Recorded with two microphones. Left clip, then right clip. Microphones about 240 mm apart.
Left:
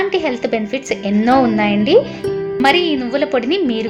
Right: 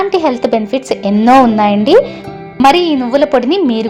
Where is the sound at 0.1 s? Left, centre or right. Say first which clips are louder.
Right 6 dB; right.